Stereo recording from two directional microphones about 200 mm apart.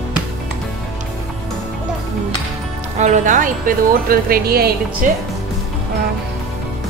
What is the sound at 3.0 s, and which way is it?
Speech, 40° right (ahead or behind).